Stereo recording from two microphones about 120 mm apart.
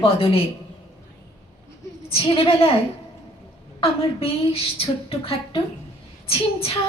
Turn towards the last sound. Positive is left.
turn(degrees=55)  # may be behind; listen again after turning